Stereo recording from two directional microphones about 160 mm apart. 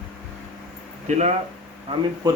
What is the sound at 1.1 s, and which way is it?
Speech, 45° right (ahead or behind).